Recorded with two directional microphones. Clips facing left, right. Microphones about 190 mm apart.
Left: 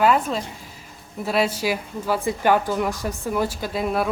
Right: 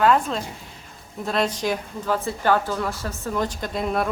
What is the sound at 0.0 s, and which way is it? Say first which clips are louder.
Speech: even; 5° left (ahead or behind).